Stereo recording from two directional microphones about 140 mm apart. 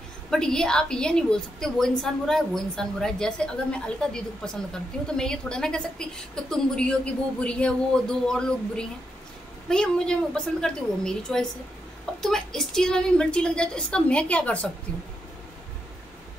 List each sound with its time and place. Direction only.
0.3 s a woman's voice: 5° left (ahead or behind)